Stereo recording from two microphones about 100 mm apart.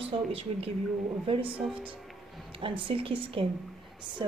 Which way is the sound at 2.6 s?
60° right (ahead or behind).